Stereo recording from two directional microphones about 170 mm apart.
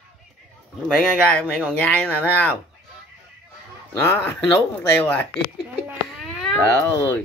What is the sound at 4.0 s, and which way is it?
Speech, 10° left (ahead or behind).